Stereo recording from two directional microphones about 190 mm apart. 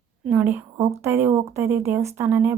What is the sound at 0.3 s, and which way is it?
Speech, 10° right (ahead or behind).